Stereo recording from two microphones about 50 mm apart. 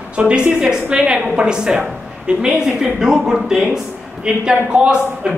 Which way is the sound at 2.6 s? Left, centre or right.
Centre.